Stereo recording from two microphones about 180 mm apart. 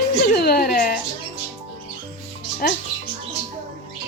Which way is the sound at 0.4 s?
55° left (ahead or behind).